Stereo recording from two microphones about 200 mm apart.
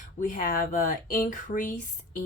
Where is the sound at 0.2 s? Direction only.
40° left (ahead or behind).